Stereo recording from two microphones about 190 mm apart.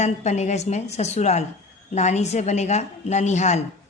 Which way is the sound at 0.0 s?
35° left (ahead or behind).